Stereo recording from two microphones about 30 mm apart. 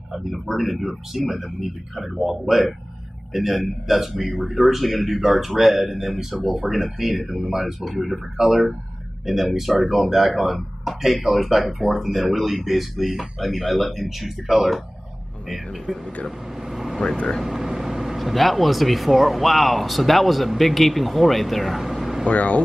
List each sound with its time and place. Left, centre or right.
0.1 s speech: centre
6.3 s speech: centre
15.9 s speech: centre
16.3 s vehicle: centre
17.5 s speech: centre
22.3 s speech: left